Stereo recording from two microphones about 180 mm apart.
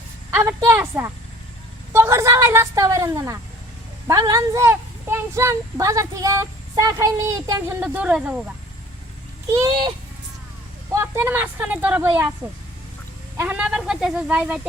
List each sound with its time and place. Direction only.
0.3 s speech: 15° right (ahead or behind)
7.8 s speech: 5° right (ahead or behind)
9.5 s a child's voice: 20° right (ahead or behind)
10.9 s speech: 15° right (ahead or behind)
13.3 s speech: 10° right (ahead or behind)